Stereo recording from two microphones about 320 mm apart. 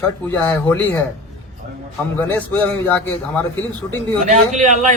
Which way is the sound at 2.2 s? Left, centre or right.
Centre.